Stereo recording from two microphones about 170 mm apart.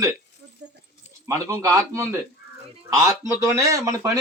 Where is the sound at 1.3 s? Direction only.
15° right (ahead or behind).